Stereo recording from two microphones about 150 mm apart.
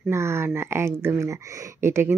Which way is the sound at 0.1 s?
15° right (ahead or behind).